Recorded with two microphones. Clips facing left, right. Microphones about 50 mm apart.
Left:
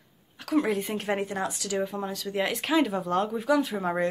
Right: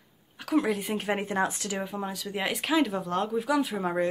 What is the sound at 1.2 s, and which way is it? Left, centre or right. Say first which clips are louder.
Speech: right 3 dB; right.